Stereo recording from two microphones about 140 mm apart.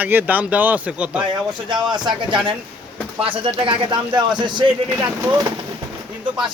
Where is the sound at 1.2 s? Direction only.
35° right (ahead or behind).